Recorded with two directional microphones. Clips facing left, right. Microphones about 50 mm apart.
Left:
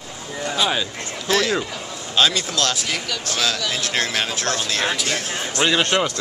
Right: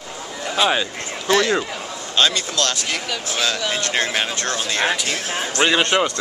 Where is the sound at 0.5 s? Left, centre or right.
Centre.